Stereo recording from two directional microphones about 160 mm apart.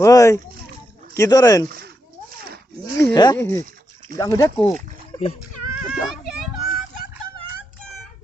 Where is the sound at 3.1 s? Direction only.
20° left (ahead or behind).